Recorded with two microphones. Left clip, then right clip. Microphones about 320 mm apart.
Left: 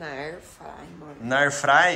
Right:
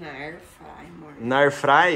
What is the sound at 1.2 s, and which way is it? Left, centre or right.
Speech, centre.